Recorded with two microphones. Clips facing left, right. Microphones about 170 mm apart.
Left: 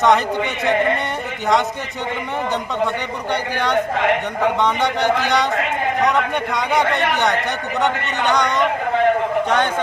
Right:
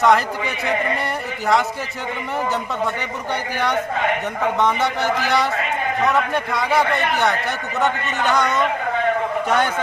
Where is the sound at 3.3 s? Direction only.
10° right (ahead or behind).